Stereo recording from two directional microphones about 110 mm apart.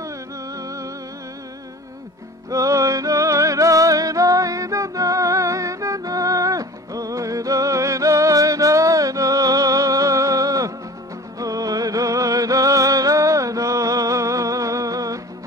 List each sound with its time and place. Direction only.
0.6 s music: 30° right (ahead or behind)
2.5 s music: 30° right (ahead or behind)